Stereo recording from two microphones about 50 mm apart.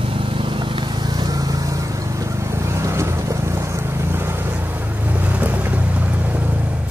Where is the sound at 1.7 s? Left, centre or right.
Right.